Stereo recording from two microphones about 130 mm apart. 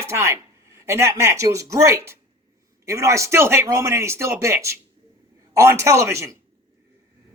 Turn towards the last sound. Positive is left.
turn(degrees=-20)  # may be behind; listen again after turning